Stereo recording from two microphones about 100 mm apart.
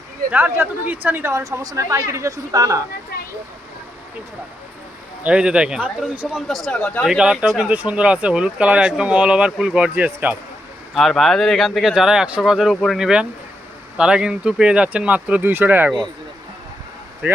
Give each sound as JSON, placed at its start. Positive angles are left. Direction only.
{"t": 0.3, "sound": "a woman's voice", "side_deg": -20}
{"t": 5.2, "sound": "speech", "side_deg": -10}
{"t": 6.5, "sound": "speech", "side_deg": 0}
{"t": 6.8, "sound": "speech", "side_deg": 10}
{"t": 7.1, "sound": "speech", "side_deg": -5}
{"t": 10.9, "sound": "speech", "side_deg": 0}
{"t": 12.7, "sound": "speech", "side_deg": 5}
{"t": 13.0, "sound": "speech", "side_deg": -5}